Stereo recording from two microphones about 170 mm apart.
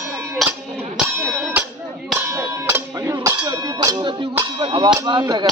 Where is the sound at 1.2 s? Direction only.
5° left (ahead or behind).